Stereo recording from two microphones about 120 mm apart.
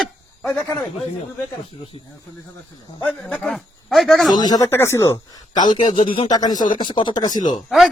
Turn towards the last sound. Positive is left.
turn(degrees=35)  # may be behind; listen again after turning